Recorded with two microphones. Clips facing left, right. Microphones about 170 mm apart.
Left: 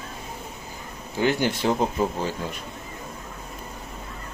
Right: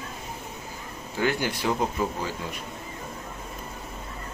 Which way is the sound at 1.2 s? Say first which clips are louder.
Left 4 dB; 25° left (ahead or behind).